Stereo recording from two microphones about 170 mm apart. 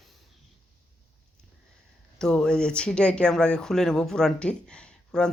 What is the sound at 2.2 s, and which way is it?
Speech, 5° left (ahead or behind).